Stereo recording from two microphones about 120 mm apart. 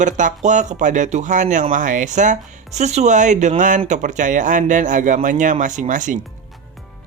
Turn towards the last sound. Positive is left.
turn(degrees=-90)